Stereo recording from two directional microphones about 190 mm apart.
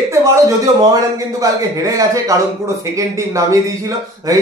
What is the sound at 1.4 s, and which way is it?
Speech, 15° right (ahead or behind).